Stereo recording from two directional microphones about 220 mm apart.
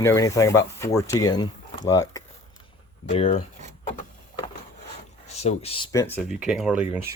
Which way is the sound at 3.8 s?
35° left (ahead or behind).